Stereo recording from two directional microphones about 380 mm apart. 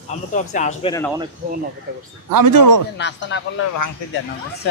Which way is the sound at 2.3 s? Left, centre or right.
Right.